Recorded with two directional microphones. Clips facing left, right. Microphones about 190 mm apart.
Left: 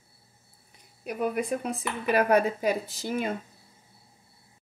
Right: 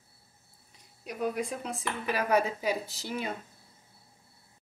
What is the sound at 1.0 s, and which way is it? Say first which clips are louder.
Speech: left 3 dB; 55° left (ahead or behind).